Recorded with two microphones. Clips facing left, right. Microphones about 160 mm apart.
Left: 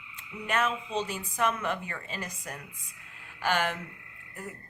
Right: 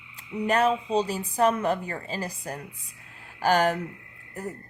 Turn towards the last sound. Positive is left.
turn(degrees=-40)  # may be behind; listen again after turning